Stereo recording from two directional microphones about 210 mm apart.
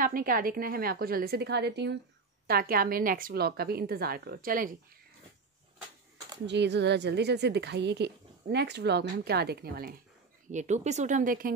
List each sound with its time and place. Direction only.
0.0 s a woman's voice: 45° right (ahead or behind)
6.4 s a woman's voice: 55° right (ahead or behind)
10.5 s speech: 35° right (ahead or behind)